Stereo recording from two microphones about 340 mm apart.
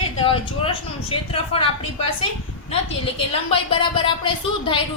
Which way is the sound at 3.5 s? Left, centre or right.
Centre.